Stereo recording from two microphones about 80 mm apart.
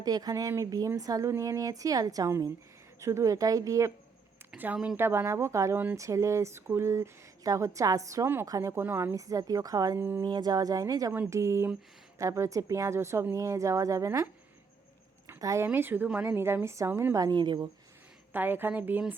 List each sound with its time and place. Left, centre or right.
0.0 s a woman's voice: right
4.5 s speech: centre
4.9 s speech: right
5.7 s speech: right
6.0 s a woman's voice: right
8.7 s speech: right
9.1 s a woman's voice: right
10.2 s a woman's voice: right
11.3 s speech: right
15.4 s speech: right
15.6 s speech: right
17.2 s a woman's voice: right
18.3 s speech: right